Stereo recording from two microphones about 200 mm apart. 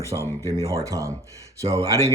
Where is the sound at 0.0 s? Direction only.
15° right (ahead or behind).